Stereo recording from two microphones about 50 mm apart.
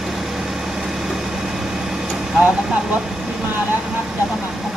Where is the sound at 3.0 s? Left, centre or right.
Centre.